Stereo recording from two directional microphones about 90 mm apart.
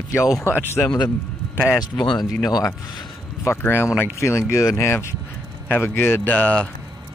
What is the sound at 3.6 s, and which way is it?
Speech, 25° left (ahead or behind).